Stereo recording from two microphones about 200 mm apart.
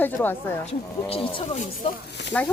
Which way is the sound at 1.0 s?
25° left (ahead or behind).